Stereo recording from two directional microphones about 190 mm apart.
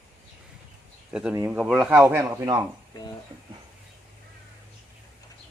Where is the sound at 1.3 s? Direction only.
10° right (ahead or behind).